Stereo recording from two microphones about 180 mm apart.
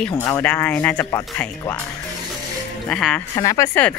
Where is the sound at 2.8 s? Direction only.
5° left (ahead or behind).